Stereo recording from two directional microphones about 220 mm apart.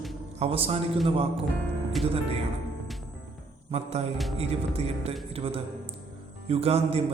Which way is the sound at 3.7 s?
30° right (ahead or behind).